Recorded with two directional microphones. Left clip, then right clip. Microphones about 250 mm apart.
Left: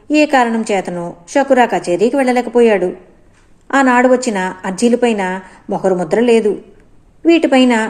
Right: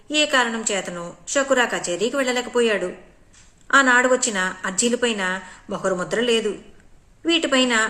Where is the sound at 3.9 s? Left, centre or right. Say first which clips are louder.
Left 5 dB; right.